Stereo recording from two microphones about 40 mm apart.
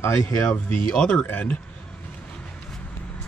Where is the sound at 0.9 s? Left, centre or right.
Left.